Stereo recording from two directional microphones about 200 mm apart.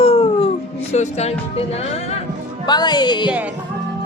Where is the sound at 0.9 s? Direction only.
35° left (ahead or behind).